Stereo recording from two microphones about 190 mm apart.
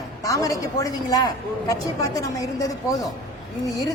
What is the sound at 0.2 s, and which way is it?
A woman's voice, 15° left (ahead or behind).